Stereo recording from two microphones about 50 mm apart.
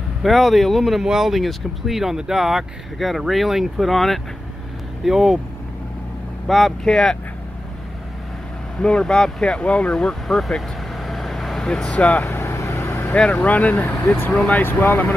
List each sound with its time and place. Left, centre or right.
0.2 s speech: centre
5.0 s speech: centre
6.4 s speech: centre
8.7 s speech: centre
10.2 s vehicle: centre
11.9 s speech: left
12.4 s vehicle: left
13.1 s speech: left
14.6 s speech: left